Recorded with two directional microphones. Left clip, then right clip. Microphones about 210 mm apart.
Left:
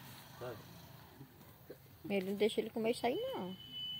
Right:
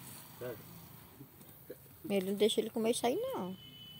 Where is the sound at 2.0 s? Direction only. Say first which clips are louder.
Right 4 dB; 25° right (ahead or behind).